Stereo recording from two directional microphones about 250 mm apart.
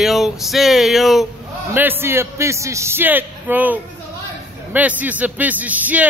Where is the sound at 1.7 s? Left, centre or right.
Centre.